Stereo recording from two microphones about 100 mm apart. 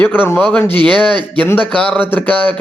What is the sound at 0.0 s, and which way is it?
Speech, 20° left (ahead or behind).